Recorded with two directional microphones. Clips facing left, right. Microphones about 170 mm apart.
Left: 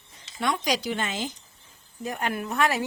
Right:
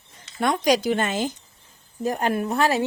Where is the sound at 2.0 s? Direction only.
35° right (ahead or behind).